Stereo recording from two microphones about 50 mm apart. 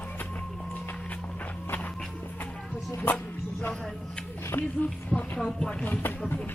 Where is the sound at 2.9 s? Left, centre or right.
Left.